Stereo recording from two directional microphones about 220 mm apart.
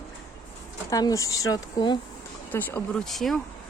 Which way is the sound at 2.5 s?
10° left (ahead or behind).